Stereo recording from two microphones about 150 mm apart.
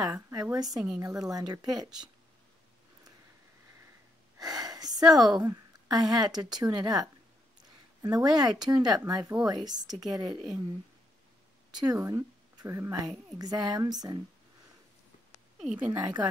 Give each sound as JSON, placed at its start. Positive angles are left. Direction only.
{"t": 0.0, "sound": "speech", "side_deg": -20}
{"t": 4.4, "sound": "a woman's voice", "side_deg": -25}
{"t": 11.7, "sound": "speech", "side_deg": -25}
{"t": 15.6, "sound": "speech", "side_deg": -10}
{"t": 15.9, "sound": "speech", "side_deg": -30}